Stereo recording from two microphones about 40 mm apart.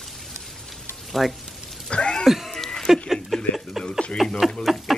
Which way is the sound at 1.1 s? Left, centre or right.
Centre.